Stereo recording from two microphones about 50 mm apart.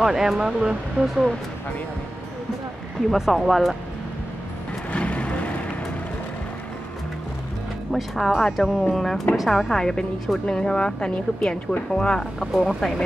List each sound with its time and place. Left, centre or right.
0.0 s speech: centre
3.1 s speech: centre
4.9 s vehicle: left
7.9 s speech: centre
10.4 s speech: centre